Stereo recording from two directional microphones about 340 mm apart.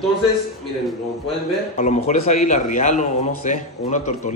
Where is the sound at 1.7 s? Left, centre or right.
Centre.